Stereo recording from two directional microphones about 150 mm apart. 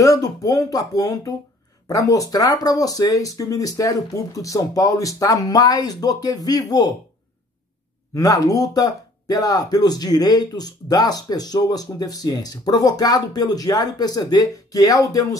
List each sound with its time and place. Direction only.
0.0 s speech: 25° left (ahead or behind)
8.1 s speech: 20° left (ahead or behind)